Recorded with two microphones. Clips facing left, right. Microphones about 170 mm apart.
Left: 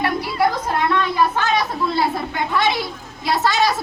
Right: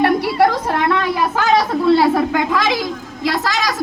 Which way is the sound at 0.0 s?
65° right (ahead or behind).